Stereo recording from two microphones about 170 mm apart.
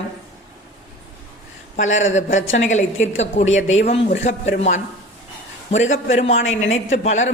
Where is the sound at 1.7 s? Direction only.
45° left (ahead or behind).